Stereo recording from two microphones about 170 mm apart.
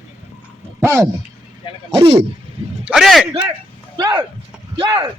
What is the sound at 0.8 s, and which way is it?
Speech, 15° right (ahead or behind).